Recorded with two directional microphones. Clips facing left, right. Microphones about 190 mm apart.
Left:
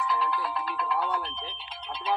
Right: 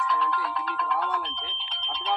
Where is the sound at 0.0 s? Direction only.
5° left (ahead or behind).